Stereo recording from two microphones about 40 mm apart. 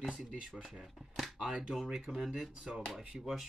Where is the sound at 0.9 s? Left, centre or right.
Centre.